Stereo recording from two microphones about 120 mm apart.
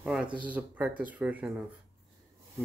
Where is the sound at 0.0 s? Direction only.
5° right (ahead or behind).